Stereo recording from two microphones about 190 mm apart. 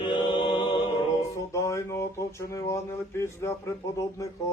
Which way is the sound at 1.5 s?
15° left (ahead or behind).